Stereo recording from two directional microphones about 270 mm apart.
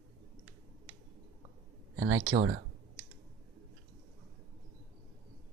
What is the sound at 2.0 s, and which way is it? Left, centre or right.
Speech, right.